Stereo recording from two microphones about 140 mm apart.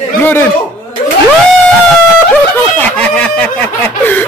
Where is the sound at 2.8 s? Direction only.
10° left (ahead or behind).